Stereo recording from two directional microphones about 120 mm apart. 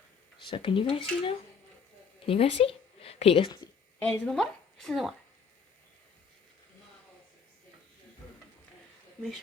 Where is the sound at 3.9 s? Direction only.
15° left (ahead or behind).